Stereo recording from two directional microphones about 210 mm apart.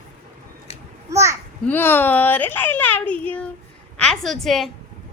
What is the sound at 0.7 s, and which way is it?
Children playing, 30° left (ahead or behind).